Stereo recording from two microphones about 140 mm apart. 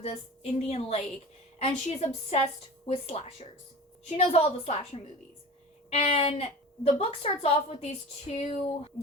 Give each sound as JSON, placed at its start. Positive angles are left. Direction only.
{"t": 0.0, "sound": "a woman's voice", "side_deg": 50}